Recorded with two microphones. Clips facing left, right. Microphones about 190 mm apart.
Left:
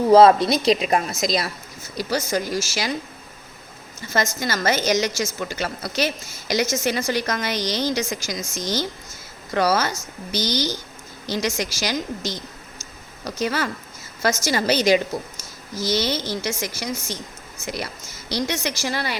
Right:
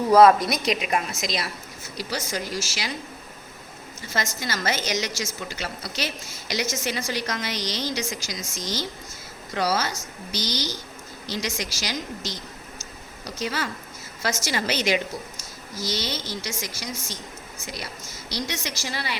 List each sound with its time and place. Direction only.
0.1 s a woman's voice: 25° left (ahead or behind); by 2.9 s 45° left (ahead or behind)
4.1 s a woman's voice: 45° left (ahead or behind)
14.2 s speech: 45° left (ahead or behind)
15.9 s a woman's voice: 55° left (ahead or behind)
18.3 s a woman's voice: 60° left (ahead or behind)